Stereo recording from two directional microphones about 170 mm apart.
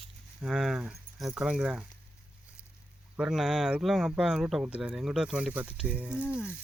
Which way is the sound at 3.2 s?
5° right (ahead or behind).